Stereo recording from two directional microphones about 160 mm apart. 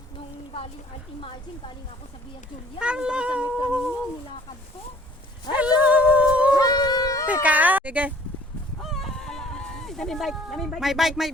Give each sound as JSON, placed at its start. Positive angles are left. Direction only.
{"t": 1.2, "sound": "a woman's voice", "side_deg": 30}
{"t": 2.7, "sound": "speech", "side_deg": -5}
{"t": 5.5, "sound": "a sound", "side_deg": -10}
{"t": 6.5, "sound": "a sound", "side_deg": 25}
{"t": 7.3, "sound": "speech", "side_deg": -10}
{"t": 8.8, "sound": "fowl", "side_deg": 0}